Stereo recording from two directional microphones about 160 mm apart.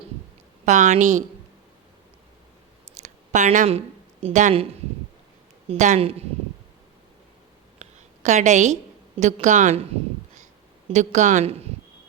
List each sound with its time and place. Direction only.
0.6 s speech: 50° right (ahead or behind)
3.0 s a sound: 50° right (ahead or behind)
5.6 s a woman's voice: 50° right (ahead or behind)
7.8 s a sound: 45° right (ahead or behind)
9.2 s speech: 50° right (ahead or behind)
10.8 s speech: 45° right (ahead or behind)